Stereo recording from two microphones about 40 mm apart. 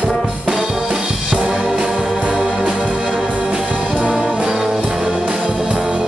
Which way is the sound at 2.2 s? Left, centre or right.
Right.